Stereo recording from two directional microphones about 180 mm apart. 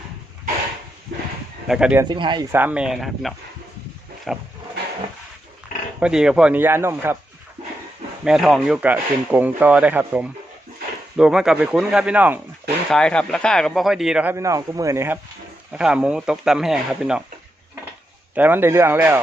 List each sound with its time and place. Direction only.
1.6 s speech: 5° right (ahead or behind)
2.0 s speech: 25° right (ahead or behind)
2.5 s speech: 10° right (ahead or behind)
6.0 s speech: 5° right (ahead or behind)
8.2 s speech: centre (ahead or behind)
12.9 s speech: 5° left (ahead or behind)
18.3 s speech: 10° right (ahead or behind)